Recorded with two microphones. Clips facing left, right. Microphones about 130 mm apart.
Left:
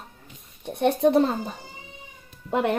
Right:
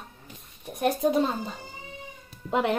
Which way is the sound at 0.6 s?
70° left (ahead or behind).